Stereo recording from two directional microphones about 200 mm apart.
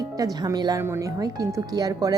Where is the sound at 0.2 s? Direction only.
20° right (ahead or behind).